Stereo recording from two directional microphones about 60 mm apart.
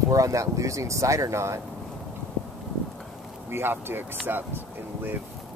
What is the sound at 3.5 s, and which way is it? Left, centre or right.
Speech, right.